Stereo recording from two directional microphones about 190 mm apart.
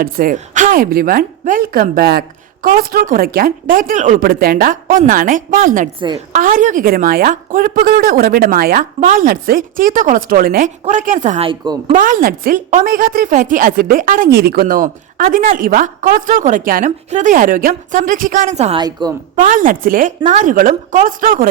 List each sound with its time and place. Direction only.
0.0 s speech: 50° right (ahead or behind)
6.0 s speech: 25° right (ahead or behind)
6.3 s speech: 45° right (ahead or behind)
11.4 s speech: 20° right (ahead or behind)
11.9 s speech: 45° right (ahead or behind)
18.8 s speech: 20° right (ahead or behind)
19.4 s speech: 45° right (ahead or behind)